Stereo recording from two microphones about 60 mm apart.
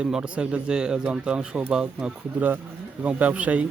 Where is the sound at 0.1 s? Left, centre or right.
Centre.